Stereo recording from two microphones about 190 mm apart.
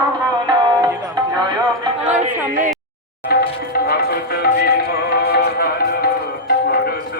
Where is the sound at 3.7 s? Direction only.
55° left (ahead or behind).